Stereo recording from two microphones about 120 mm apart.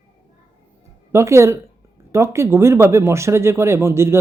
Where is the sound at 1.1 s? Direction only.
25° right (ahead or behind).